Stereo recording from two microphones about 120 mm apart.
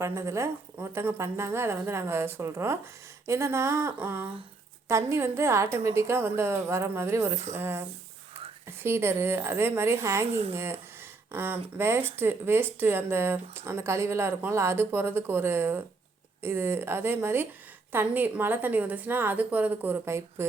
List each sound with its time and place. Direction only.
0.0 s speech: 25° right (ahead or behind)
10.2 s speech: 60° right (ahead or behind)
10.5 s a woman's voice: 20° right (ahead or behind)